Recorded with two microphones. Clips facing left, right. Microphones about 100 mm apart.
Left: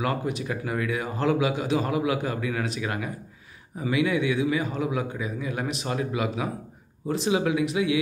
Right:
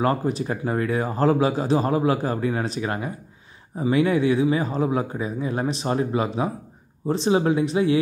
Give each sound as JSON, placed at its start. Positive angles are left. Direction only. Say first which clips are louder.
{"t": 0.0, "sound": "a man's voice", "louder": "right 5 dB", "side_deg": -35}